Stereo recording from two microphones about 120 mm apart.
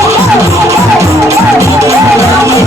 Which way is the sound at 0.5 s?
25° right (ahead or behind).